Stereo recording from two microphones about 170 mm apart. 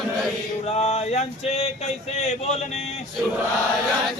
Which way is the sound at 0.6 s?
40° left (ahead or behind).